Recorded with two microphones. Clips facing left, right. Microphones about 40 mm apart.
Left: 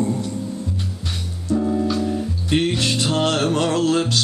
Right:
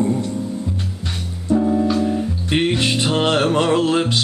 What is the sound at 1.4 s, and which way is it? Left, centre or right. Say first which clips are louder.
Music: right 3 dB; centre.